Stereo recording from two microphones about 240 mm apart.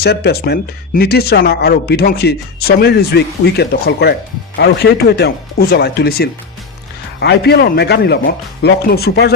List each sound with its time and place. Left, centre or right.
0.0 s speech: left